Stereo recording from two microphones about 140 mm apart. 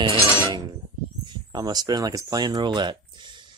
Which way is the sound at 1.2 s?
30° right (ahead or behind).